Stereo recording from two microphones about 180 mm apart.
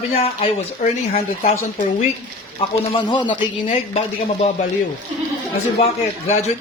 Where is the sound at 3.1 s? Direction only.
25° left (ahead or behind).